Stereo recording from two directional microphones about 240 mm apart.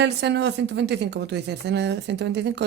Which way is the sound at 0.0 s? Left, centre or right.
Right.